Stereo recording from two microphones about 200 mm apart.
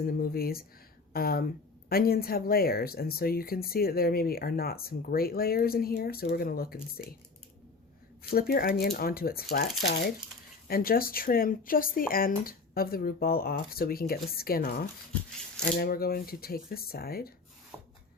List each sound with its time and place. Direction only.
0.0 s speech: 50° left (ahead or behind)
8.2 s speech: 50° left (ahead or behind)
10.7 s speech: 45° left (ahead or behind)